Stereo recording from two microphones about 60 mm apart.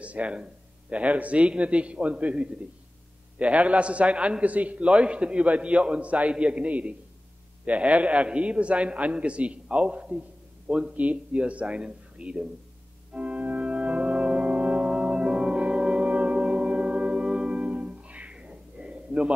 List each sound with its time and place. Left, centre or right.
0.0 s a man's voice: right
13.1 s organ: right